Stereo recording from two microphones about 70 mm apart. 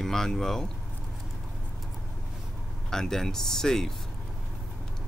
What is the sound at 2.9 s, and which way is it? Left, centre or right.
Speech, centre.